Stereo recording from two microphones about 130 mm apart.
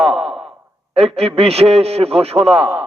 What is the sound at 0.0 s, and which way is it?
Sigh, 50° right (ahead or behind).